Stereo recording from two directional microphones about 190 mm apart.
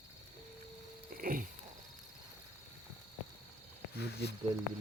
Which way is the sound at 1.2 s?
45° right (ahead or behind).